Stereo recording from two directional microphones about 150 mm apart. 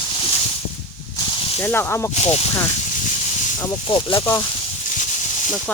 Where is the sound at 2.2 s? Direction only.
45° left (ahead or behind).